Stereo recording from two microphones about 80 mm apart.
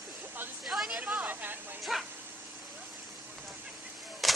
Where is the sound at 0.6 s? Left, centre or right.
Centre.